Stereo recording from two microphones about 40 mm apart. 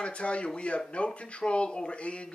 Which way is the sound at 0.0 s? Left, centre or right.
Left.